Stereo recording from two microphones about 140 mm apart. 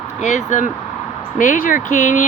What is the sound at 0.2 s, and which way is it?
Speech, 60° left (ahead or behind).